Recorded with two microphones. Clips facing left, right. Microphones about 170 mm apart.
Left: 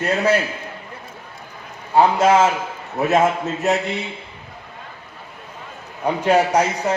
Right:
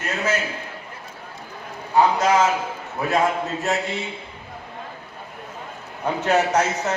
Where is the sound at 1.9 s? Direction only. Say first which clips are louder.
Left 3 dB; 25° left (ahead or behind).